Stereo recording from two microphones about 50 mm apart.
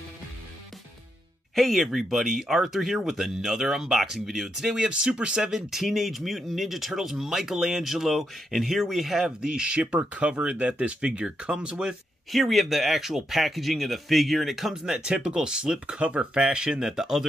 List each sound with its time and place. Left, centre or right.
1.5 s speech: centre
4.7 s speech: centre
9.4 s speech: centre
12.3 s speech: centre